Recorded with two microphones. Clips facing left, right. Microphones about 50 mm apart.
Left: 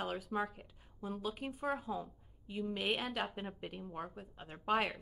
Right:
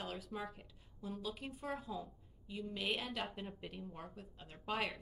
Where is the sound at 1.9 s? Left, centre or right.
Left.